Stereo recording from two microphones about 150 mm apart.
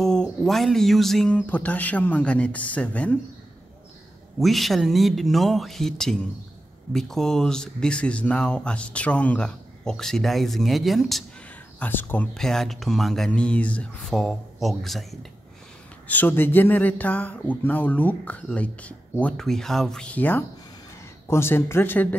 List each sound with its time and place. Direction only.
0.0 s a man's voice: 5° left (ahead or behind)
4.4 s speech: centre (ahead or behind)
11.8 s speech: 15° left (ahead or behind)
16.1 s a man's voice: 10° left (ahead or behind)